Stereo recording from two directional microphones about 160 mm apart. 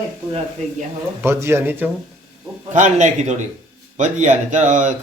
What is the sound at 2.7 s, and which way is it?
A man's voice, 50° right (ahead or behind).